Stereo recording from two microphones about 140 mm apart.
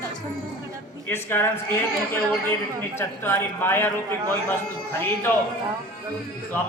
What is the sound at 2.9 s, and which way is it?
A man's voice, 15° left (ahead or behind).